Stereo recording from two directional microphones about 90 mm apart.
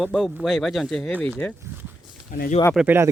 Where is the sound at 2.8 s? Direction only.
25° right (ahead or behind).